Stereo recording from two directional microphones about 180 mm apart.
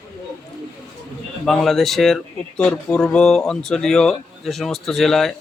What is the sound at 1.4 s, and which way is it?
Speech, centre (ahead or behind).